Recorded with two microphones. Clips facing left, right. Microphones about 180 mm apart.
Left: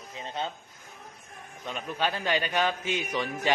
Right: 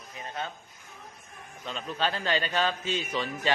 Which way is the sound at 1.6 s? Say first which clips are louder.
Even; 15° left (ahead or behind).